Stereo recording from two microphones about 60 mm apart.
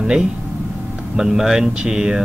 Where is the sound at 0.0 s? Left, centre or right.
Centre.